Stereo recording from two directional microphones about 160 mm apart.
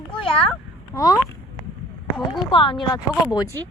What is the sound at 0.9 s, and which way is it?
Speech, 25° left (ahead or behind).